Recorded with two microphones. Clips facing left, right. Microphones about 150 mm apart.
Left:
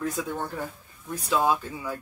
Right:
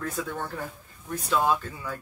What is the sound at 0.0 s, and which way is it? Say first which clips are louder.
Speech: left 2 dB; 15° left (ahead or behind).